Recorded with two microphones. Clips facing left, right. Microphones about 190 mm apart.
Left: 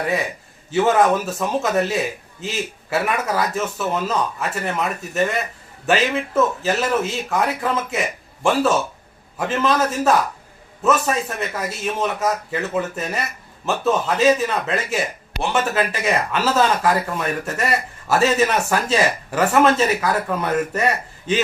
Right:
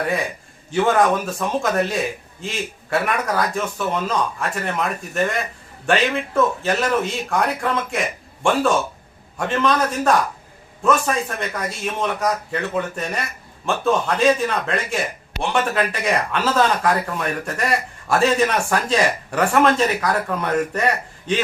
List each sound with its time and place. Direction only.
0.7 s speech: 5° left (ahead or behind)